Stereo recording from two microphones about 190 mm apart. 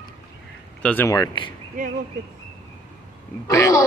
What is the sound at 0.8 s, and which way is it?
Speech, 5° left (ahead or behind).